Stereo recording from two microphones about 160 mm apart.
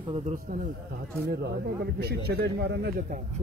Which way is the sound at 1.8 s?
90° right.